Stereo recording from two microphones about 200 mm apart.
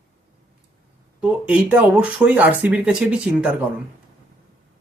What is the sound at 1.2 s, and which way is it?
Speech, 5° right (ahead or behind).